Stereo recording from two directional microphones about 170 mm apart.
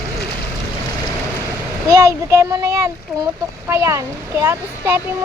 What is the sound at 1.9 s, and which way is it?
A child's voice, 20° right (ahead or behind).